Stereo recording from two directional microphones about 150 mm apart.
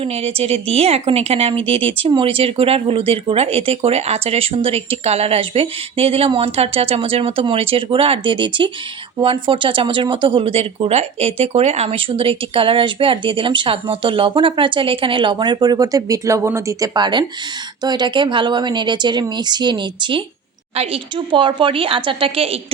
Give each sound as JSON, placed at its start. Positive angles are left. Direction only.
{"t": 0.0, "sound": "speech", "side_deg": -40}